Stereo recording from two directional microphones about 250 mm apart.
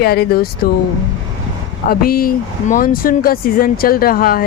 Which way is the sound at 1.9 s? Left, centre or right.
Left.